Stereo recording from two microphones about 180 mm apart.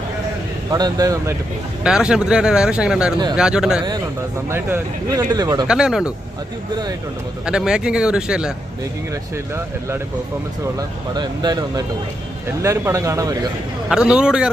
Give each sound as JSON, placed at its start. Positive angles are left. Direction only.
{"t": 0.7, "sound": "speech", "side_deg": -20}
{"t": 1.8, "sound": "speech", "side_deg": -5}
{"t": 5.6, "sound": "speech", "side_deg": -5}
{"t": 7.4, "sound": "speech", "side_deg": -5}
{"t": 10.8, "sound": "speech", "side_deg": -20}
{"t": 13.9, "sound": "speech", "side_deg": -5}